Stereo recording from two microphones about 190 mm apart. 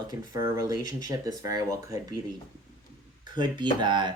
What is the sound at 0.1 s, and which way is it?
Speech, 20° right (ahead or behind).